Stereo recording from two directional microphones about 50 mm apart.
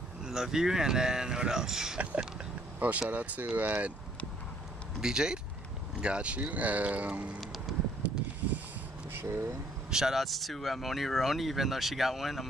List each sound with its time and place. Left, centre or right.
0.2 s speech: centre
2.8 s speech: right
5.0 s speech: centre
7.7 s a sound: centre
9.2 s speech: right
9.8 s speech: centre